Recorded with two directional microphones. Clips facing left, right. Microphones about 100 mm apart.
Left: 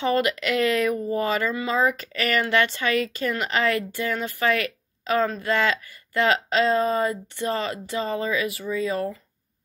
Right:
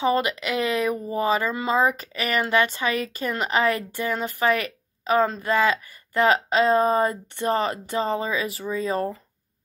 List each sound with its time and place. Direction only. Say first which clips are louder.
0.0 s speech: even; 20° right (ahead or behind)
1.5 s speech: right 2 dB; 35° right (ahead or behind)
2.1 s a woman's voice: even; 15° right (ahead or behind); by 9.2 s 35° right (ahead or behind)